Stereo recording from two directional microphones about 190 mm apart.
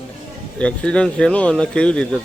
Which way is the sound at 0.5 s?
5° left (ahead or behind).